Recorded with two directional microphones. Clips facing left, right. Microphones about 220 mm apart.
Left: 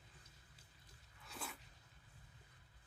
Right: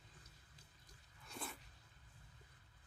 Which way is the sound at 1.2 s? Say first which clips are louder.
Right 1 dB; centre (ahead or behind).